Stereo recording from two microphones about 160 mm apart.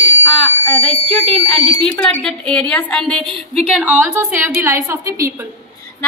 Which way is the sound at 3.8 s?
10° right (ahead or behind).